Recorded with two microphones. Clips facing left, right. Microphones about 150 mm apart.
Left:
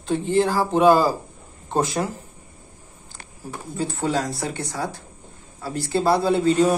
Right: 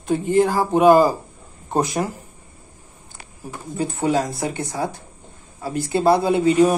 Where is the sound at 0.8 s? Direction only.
50° right (ahead or behind).